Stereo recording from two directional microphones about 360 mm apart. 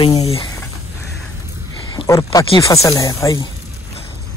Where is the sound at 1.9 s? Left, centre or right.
Centre.